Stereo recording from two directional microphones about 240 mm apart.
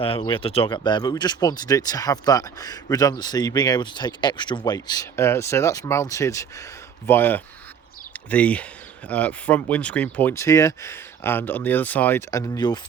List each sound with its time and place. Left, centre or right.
0.0 s speech: left